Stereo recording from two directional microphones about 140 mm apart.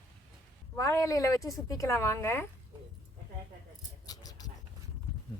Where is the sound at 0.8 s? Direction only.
20° left (ahead or behind).